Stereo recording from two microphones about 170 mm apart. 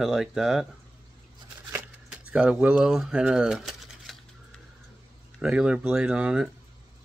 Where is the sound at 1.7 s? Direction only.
5° right (ahead or behind).